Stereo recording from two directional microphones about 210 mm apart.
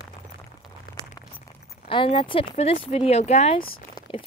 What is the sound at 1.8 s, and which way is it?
Speech, 25° left (ahead or behind).